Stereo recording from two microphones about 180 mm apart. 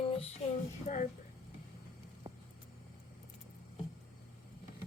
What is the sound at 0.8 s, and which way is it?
Speech, 45° left (ahead or behind).